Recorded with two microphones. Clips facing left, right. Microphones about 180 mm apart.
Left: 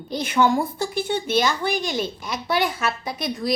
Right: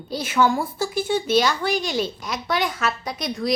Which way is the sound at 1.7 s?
50° left (ahead or behind).